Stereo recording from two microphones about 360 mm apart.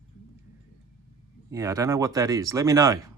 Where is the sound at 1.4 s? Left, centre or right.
Centre.